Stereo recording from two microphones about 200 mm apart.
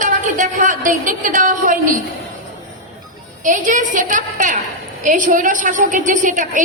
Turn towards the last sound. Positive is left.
turn(degrees=-40)  # may be behind; listen again after turning